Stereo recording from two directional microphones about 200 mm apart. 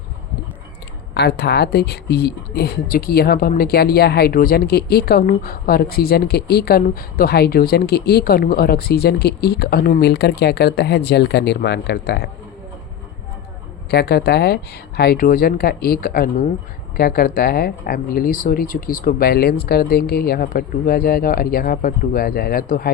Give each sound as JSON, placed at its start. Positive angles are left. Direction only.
{"t": 1.1, "sound": "speech", "side_deg": 55}
{"t": 13.9, "sound": "speech", "side_deg": 55}